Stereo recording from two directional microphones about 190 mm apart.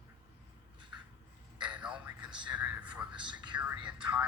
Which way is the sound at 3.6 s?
5° right (ahead or behind).